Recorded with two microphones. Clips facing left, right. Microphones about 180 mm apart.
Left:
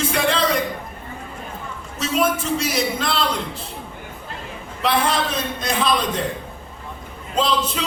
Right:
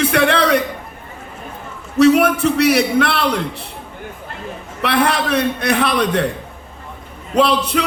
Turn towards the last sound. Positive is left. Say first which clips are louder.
# right 6 dB
turn(degrees=-65)  # may be behind; listen again after turning